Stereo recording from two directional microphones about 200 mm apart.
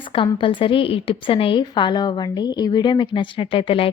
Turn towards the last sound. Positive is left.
turn(degrees=25)  # may be behind; listen again after turning